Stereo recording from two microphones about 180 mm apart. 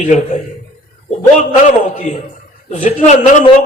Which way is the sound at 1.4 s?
40° left (ahead or behind).